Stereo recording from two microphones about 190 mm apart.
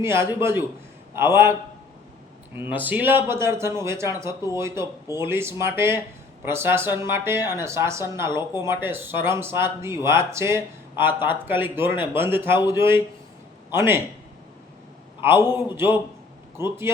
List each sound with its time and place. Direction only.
0.0 s speech: 15° right (ahead or behind)
2.6 s speech: 10° right (ahead or behind)
15.2 s speech: 10° right (ahead or behind)